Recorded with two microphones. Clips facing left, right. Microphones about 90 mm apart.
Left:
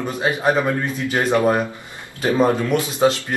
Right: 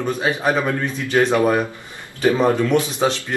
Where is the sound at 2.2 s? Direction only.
10° left (ahead or behind).